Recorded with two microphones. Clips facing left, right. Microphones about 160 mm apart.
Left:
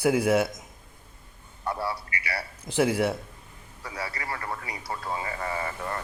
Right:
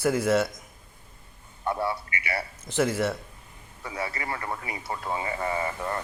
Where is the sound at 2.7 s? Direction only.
10° left (ahead or behind).